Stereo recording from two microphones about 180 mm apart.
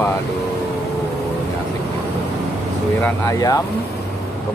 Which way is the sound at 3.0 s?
15° left (ahead or behind).